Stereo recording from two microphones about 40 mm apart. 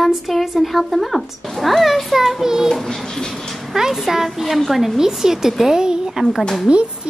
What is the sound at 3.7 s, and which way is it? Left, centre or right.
A woman's voice, centre.